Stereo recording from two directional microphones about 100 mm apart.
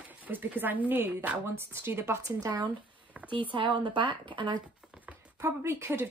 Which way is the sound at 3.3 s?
55° right (ahead or behind).